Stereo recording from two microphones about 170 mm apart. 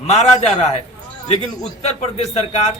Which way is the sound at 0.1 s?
35° left (ahead or behind).